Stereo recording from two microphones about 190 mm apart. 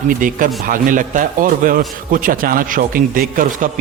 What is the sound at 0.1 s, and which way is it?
A man's voice, 45° right (ahead or behind).